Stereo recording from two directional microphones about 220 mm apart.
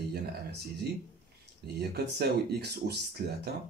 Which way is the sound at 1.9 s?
50° right (ahead or behind).